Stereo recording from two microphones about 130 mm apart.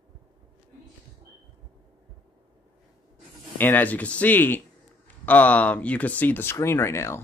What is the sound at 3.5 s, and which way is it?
Speech, 15° left (ahead or behind).